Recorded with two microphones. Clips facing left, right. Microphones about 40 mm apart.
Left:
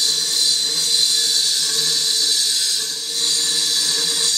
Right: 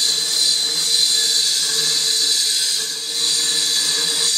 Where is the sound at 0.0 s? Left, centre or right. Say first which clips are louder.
Even; right.